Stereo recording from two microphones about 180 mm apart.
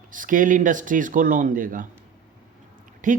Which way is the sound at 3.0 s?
45° right (ahead or behind).